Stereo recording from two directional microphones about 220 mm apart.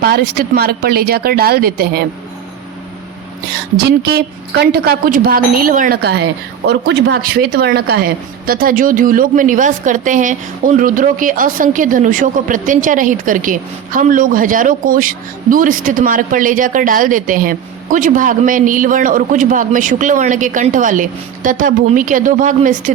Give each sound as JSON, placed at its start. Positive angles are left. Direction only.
{"t": 0.0, "sound": "a woman's voice", "side_deg": -45}
{"t": 3.8, "sound": "a woman's voice", "side_deg": -45}